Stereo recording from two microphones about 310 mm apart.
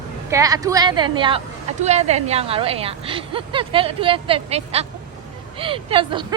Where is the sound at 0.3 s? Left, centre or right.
Centre.